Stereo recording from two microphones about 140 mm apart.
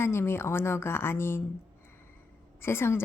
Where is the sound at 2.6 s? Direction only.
15° left (ahead or behind).